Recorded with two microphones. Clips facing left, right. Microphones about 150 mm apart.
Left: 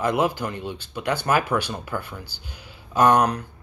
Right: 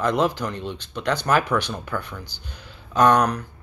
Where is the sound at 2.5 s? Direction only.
10° left (ahead or behind).